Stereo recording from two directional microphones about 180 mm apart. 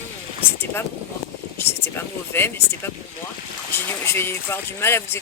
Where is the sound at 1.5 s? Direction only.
10° left (ahead or behind).